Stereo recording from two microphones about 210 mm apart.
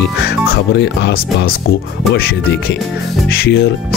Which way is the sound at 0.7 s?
55° left (ahead or behind).